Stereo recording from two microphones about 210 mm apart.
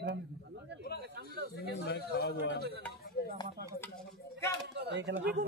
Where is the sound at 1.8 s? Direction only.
50° left (ahead or behind).